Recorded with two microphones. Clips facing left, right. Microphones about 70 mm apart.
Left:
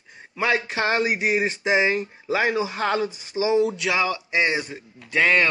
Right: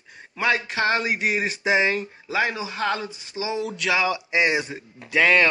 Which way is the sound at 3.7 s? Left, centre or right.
Centre.